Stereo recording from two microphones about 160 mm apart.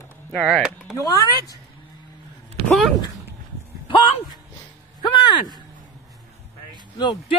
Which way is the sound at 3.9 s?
30° left (ahead or behind).